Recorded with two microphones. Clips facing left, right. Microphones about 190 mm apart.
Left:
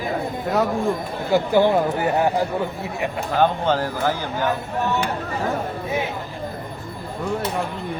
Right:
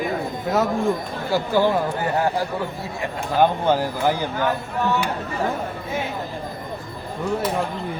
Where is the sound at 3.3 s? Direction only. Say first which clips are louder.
Right 2 dB; 15° right (ahead or behind).